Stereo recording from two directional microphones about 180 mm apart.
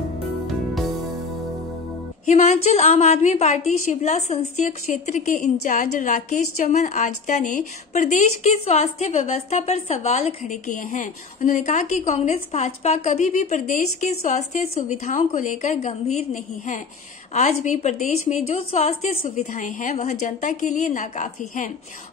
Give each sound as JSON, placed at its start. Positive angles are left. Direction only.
{"t": 2.2, "sound": "a woman's voice", "side_deg": 40}